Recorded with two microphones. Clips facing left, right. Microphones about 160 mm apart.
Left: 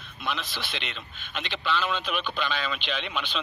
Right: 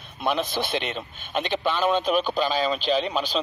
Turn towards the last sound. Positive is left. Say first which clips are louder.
# right 8 dB
turn(degrees=-40)  # may be behind; listen again after turning